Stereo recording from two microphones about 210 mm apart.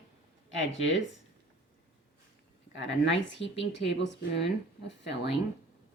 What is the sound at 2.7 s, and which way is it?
Speech, 60° left (ahead or behind).